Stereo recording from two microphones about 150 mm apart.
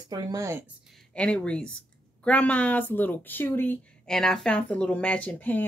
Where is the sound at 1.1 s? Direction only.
5° left (ahead or behind).